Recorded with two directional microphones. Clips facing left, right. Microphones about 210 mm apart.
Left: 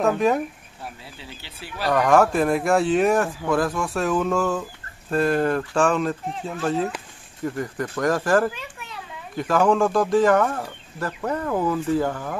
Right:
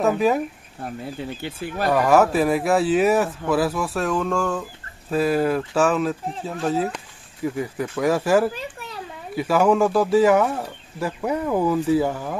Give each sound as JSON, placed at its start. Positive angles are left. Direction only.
{"t": 0.0, "sound": "speech", "side_deg": 0}
{"t": 1.0, "sound": "speech", "side_deg": -50}
{"t": 1.9, "sound": "speech", "side_deg": -5}
{"t": 8.5, "sound": "a sound", "side_deg": -40}
{"t": 9.3, "sound": "speech", "side_deg": -5}